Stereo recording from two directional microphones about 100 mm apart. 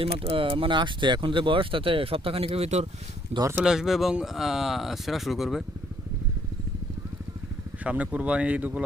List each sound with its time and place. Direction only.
0.0 s speech: 65° right (ahead or behind); by 2.8 s 90° right
3.6 s speech: 5° right (ahead or behind)
7.9 s speech: 15° right (ahead or behind)